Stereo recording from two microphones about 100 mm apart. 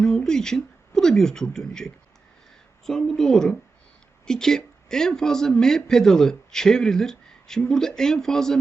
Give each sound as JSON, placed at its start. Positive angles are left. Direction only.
{"t": 0.0, "sound": "speech", "side_deg": 5}